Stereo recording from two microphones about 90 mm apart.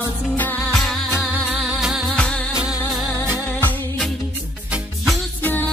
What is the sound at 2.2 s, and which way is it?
Music, 10° left (ahead or behind).